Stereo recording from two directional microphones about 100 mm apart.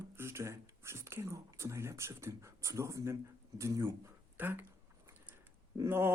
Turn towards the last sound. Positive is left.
turn(degrees=-25)  # may be behind; listen again after turning